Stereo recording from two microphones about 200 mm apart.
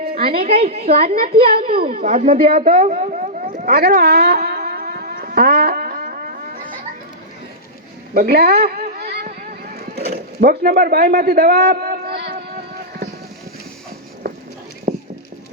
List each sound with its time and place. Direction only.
0.1 s a woman's voice: 50° right (ahead or behind)
0.4 s a woman's voice: 30° right (ahead or behind)
1.5 s a woman's voice: 50° right (ahead or behind)
2.0 s a sound: 35° right (ahead or behind)
8.1 s a sound: 50° right (ahead or behind)
14.9 s clip-clop: 50° right (ahead or behind)